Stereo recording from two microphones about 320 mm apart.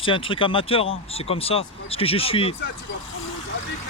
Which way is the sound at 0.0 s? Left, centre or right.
Centre.